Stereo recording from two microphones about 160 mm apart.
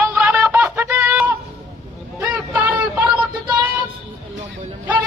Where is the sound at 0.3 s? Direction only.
10° right (ahead or behind).